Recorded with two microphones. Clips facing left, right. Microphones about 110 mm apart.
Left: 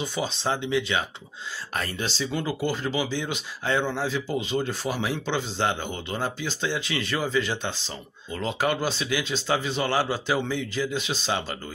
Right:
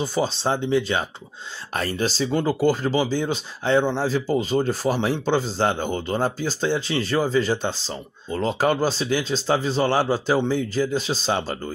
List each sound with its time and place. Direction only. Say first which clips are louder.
0.0 s speech: right 5 dB; 35° right (ahead or behind)